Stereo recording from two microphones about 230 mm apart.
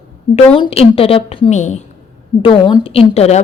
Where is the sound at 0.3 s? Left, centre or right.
Left.